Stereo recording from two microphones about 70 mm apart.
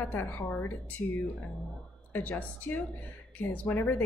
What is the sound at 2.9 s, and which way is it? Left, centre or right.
Speech, left.